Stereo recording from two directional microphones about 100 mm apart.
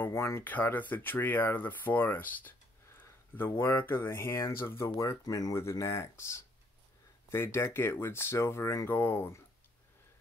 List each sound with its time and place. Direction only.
0.0 s speech: 25° left (ahead or behind)